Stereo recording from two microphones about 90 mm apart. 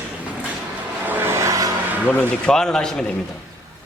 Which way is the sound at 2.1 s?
20° left (ahead or behind).